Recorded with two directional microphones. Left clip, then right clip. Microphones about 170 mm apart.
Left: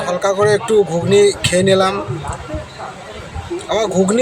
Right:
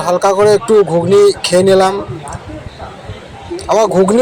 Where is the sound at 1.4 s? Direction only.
10° right (ahead or behind).